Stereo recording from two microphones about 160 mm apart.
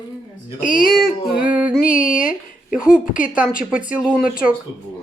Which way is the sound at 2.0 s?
55° left (ahead or behind).